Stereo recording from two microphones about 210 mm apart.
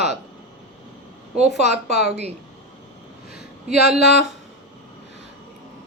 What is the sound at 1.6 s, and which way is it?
Speech, 50° left (ahead or behind).